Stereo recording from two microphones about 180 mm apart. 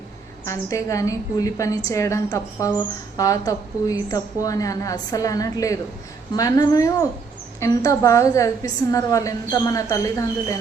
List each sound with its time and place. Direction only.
0.4 s a woman's voice: 15° left (ahead or behind)